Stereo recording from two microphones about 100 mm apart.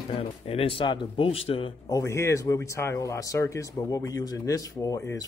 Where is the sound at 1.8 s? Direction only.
30° left (ahead or behind).